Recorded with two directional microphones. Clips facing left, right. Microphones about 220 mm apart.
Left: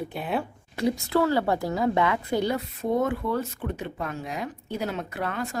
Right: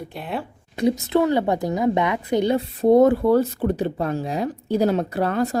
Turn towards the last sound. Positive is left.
turn(degrees=-35)  # may be behind; listen again after turning